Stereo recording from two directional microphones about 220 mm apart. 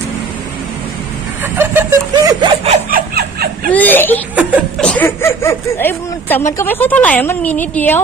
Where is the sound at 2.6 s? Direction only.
40° right (ahead or behind).